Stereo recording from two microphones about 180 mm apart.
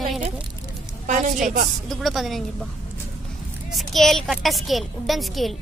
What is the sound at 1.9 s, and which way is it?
Speech, centre (ahead or behind).